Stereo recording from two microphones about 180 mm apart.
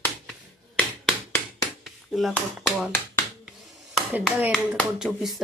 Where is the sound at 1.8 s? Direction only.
Centre (ahead or behind).